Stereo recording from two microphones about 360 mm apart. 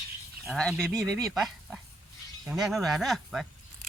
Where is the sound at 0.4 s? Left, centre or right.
Centre.